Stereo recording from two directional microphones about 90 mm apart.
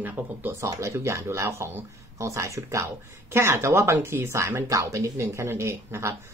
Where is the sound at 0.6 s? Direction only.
35° right (ahead or behind).